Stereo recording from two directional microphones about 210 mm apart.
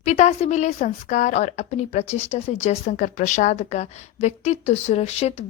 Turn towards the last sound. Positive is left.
turn(degrees=30)  # may be behind; listen again after turning